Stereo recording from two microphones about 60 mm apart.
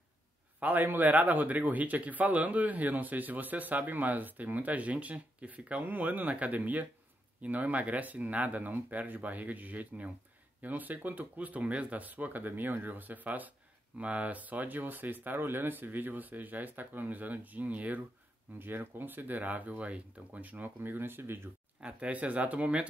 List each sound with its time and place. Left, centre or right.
0.6 s a man's voice: right
21.7 s a man's voice: right